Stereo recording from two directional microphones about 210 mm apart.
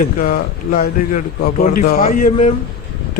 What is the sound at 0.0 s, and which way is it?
A man's voice, 40° left (ahead or behind).